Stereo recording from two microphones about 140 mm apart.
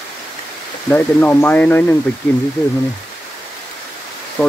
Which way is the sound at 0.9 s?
10° left (ahead or behind).